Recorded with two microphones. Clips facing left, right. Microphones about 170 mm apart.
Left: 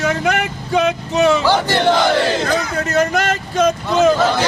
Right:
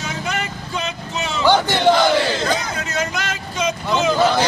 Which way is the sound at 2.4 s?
55° left (ahead or behind).